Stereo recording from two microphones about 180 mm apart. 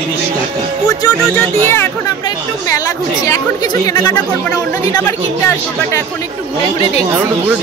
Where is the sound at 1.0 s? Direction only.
15° left (ahead or behind).